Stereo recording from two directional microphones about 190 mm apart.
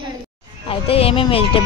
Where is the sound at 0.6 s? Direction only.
30° left (ahead or behind).